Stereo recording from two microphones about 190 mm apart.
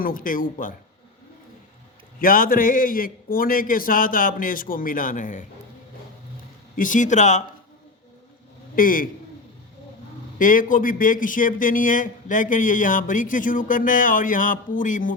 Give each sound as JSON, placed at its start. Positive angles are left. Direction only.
{"t": 0.0, "sound": "a man's voice", "side_deg": 45}
{"t": 2.1, "sound": "a man's voice", "side_deg": 45}
{"t": 6.7, "sound": "speech", "side_deg": 45}
{"t": 8.7, "sound": "a man's voice", "side_deg": 45}
{"t": 10.3, "sound": "a man's voice", "side_deg": 45}